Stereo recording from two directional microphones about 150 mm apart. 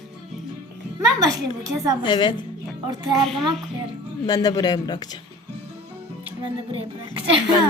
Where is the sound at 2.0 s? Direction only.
30° left (ahead or behind).